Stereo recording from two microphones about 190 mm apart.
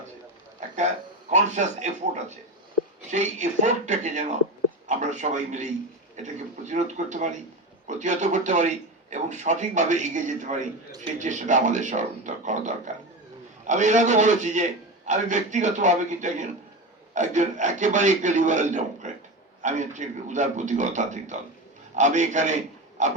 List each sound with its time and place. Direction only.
1.3 s speech: 40° right (ahead or behind)
3.1 s a man's voice: 40° right (ahead or behind)